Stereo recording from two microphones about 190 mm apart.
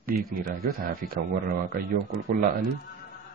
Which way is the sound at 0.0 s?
50° right (ahead or behind).